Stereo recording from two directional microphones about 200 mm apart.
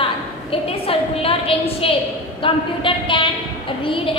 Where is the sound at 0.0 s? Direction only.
30° left (ahead or behind).